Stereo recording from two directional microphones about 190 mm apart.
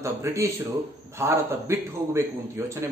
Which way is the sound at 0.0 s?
15° right (ahead or behind).